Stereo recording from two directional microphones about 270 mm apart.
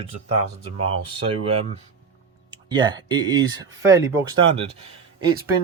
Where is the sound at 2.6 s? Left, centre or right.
Centre.